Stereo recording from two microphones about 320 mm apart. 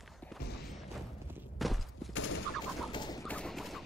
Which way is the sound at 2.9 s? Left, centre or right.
Centre.